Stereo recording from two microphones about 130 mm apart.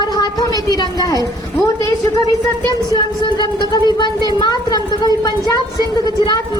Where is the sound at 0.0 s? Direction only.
30° left (ahead or behind).